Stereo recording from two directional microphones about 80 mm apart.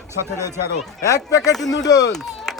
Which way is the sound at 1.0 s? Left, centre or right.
Left.